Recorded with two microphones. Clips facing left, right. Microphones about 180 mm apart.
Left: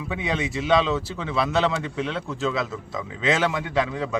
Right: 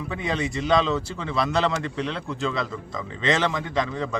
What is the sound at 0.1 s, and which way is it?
A man's voice, 5° left (ahead or behind).